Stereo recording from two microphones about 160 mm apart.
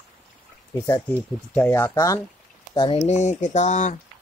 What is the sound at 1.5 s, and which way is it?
Speech, 15° left (ahead or behind).